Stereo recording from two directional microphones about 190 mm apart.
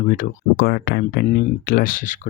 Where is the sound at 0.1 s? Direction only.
55° left (ahead or behind).